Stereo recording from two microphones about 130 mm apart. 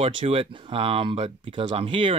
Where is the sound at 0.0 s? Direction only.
45° right (ahead or behind).